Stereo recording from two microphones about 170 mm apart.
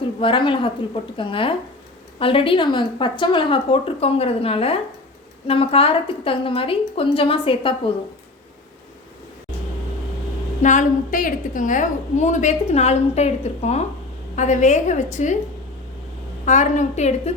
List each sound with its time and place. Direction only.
0.2 s speech: 30° left (ahead or behind)
10.6 s a woman's voice: 45° left (ahead or behind)
16.5 s a woman's voice: 45° left (ahead or behind)